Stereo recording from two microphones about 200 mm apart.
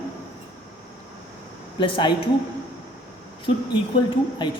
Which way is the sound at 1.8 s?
25° left (ahead or behind).